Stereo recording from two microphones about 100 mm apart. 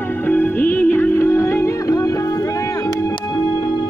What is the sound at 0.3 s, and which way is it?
Music, 20° left (ahead or behind).